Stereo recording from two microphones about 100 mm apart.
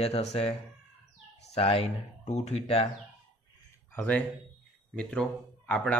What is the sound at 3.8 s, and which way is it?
Speech, 15° left (ahead or behind).